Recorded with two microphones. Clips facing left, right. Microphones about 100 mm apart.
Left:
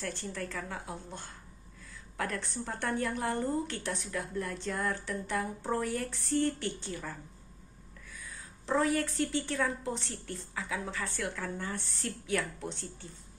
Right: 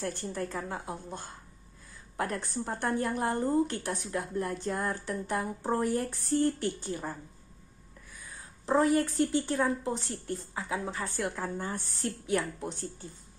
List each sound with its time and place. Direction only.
0.2 s speech: 30° right (ahead or behind)
8.7 s speech: 30° right (ahead or behind)
12.4 s speech: 15° right (ahead or behind)